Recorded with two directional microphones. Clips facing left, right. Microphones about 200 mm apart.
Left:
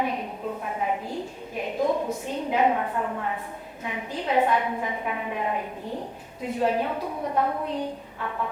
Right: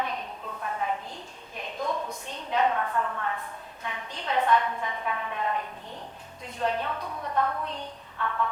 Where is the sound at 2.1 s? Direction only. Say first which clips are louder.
Left 7 dB; 10° left (ahead or behind).